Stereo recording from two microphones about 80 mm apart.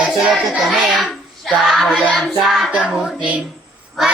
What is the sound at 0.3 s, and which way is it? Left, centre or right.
Child singing, centre.